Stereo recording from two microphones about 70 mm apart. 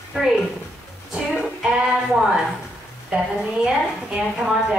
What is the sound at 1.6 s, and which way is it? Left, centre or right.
Music, centre.